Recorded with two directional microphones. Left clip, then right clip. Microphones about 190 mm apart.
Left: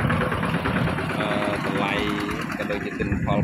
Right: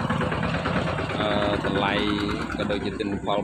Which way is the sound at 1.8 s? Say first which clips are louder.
Right 1 dB; 20° right (ahead or behind).